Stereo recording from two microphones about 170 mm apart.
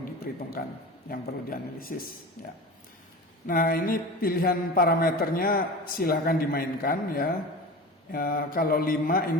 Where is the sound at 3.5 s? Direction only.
55° left (ahead or behind).